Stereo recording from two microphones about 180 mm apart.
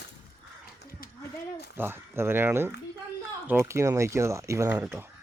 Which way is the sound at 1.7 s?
10° right (ahead or behind).